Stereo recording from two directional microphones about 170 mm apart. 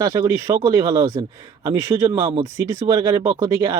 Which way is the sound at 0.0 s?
15° right (ahead or behind).